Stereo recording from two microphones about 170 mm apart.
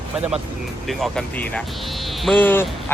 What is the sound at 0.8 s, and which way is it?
Speech, centre (ahead or behind).